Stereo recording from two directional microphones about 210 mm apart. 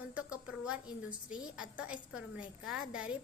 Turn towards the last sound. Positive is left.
turn(degrees=-5)  # may be behind; listen again after turning